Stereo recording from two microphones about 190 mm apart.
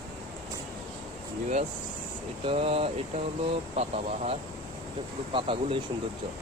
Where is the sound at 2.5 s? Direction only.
30° right (ahead or behind).